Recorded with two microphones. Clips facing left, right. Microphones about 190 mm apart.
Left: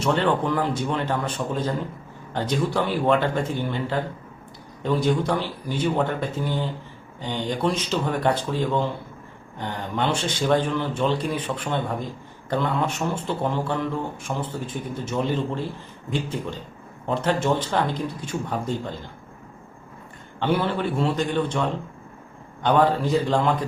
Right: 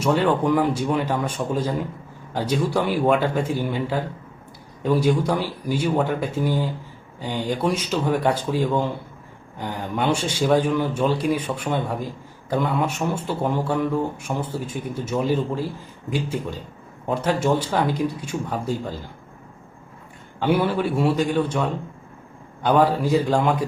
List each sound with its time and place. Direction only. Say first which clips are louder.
0.0 s speech: right 2 dB; 10° right (ahead or behind)
20.4 s speech: right 3 dB; 10° right (ahead or behind)